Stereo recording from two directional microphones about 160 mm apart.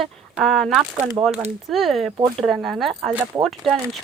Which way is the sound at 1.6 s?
Centre (ahead or behind).